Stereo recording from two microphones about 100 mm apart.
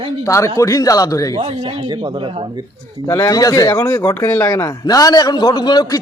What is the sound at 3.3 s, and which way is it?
A man's voice, 40° left (ahead or behind).